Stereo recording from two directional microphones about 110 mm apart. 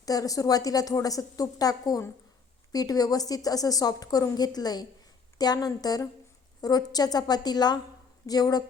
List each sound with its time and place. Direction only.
0.0 s a woman's voice: 35° left (ahead or behind)